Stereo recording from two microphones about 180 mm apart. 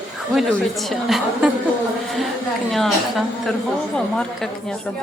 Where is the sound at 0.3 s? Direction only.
Centre (ahead or behind).